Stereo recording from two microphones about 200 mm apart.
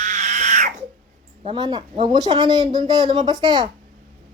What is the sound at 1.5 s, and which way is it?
Speech, 20° right (ahead or behind).